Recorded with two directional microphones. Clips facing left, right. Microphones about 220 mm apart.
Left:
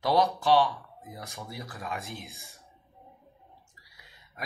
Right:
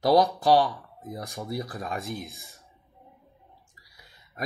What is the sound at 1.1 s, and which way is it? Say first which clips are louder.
Speech: right 8 dB; 40° right (ahead or behind).